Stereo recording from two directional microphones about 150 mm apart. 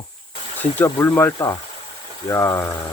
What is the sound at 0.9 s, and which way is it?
Speech, 20° left (ahead or behind).